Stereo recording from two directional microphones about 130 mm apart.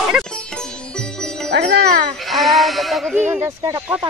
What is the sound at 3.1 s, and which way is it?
Speech, 15° right (ahead or behind).